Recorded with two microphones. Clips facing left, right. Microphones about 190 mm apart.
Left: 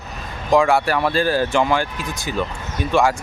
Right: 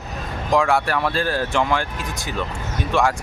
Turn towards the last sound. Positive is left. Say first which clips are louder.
# left 2 dB
turn(degrees=0)  # may be behind; listen again after turning